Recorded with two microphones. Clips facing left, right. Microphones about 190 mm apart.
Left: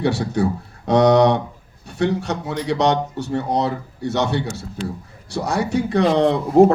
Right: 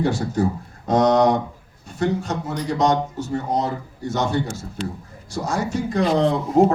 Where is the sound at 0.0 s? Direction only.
70° left (ahead or behind).